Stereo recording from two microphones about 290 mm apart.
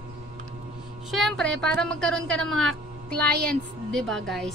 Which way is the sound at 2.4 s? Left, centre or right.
Right.